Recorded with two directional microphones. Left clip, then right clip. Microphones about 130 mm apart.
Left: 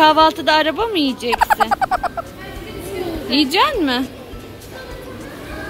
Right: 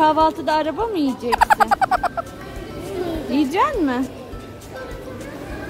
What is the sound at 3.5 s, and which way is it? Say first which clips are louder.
Speech: left 2 dB; 5° right (ahead or behind).